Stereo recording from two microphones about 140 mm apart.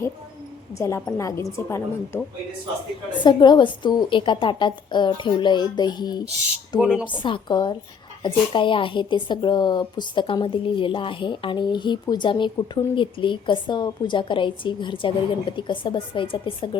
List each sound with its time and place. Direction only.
0.8 s a woman's voice: 20° left (ahead or behind)
3.2 s a woman's voice: 30° left (ahead or behind)
6.7 s speech: 5° right (ahead or behind)
7.0 s a woman's voice: 35° left (ahead or behind)